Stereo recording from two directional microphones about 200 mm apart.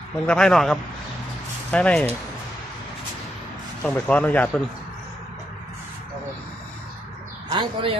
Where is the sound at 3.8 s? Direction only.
5° left (ahead or behind).